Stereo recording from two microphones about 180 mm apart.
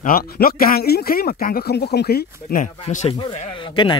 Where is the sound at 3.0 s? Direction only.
30° left (ahead or behind).